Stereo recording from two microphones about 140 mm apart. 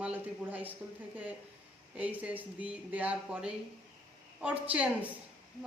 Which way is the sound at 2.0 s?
10° right (ahead or behind).